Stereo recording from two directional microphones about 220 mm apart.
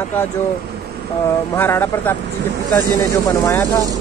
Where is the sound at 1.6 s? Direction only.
10° left (ahead or behind).